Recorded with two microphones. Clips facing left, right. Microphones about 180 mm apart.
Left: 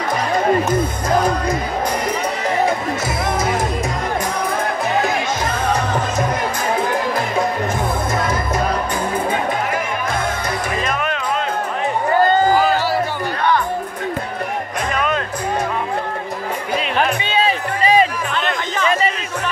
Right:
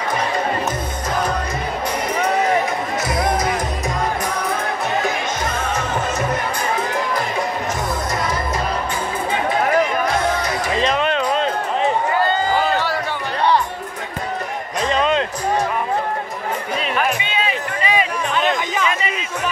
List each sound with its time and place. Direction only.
3.3 s music: 25° left (ahead or behind)
10.8 s music: 25° right (ahead or behind)
14.9 s music: 25° right (ahead or behind)
16.9 s music: 35° left (ahead or behind)
18.3 s chatter: 10° right (ahead or behind)
18.9 s music: 35° left (ahead or behind)